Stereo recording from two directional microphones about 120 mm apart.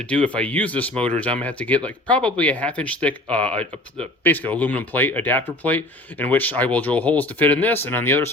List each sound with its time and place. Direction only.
0.1 s speech: 10° left (ahead or behind)